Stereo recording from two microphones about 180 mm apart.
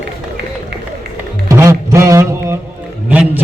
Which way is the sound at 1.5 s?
15° right (ahead or behind).